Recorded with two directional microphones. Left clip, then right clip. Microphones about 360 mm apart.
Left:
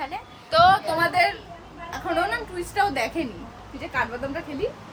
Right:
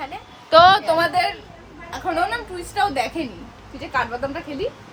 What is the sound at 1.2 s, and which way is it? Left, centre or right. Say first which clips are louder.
A woman's voice: even; centre.